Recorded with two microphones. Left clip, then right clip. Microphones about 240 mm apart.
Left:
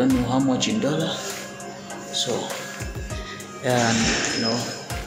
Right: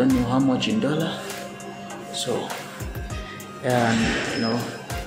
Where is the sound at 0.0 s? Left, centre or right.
Centre.